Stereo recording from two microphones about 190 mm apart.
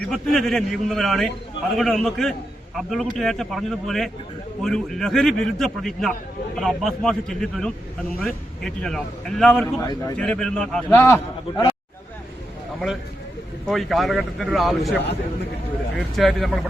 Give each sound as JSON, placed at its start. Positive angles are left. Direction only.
{"t": 0.0, "sound": "a man's voice", "side_deg": 0}
{"t": 9.8, "sound": "a man's voice", "side_deg": 20}
{"t": 10.2, "sound": "a man's voice", "side_deg": 5}
{"t": 11.0, "sound": "a man's voice", "side_deg": 15}
{"t": 13.7, "sound": "a man's voice", "side_deg": 0}
{"t": 16.1, "sound": "a man's voice", "side_deg": 0}